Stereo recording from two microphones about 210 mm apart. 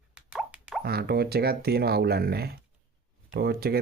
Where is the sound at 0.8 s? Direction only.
50° right (ahead or behind).